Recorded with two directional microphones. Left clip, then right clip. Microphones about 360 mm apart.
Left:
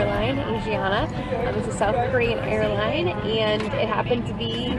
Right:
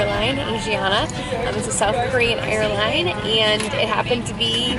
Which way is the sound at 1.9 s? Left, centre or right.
Centre.